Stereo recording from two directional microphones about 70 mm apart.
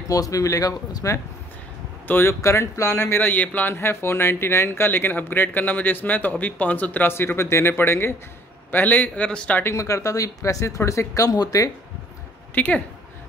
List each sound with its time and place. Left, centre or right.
0.1 s speech: left
2.0 s speech: left
2.4 s speech: left
8.7 s speech: left
9.8 s speech: left
12.5 s speech: left